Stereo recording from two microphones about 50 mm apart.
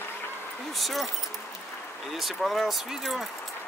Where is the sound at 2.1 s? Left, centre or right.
Centre.